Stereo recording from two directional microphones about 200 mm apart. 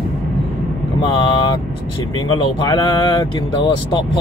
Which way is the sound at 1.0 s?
25° left (ahead or behind).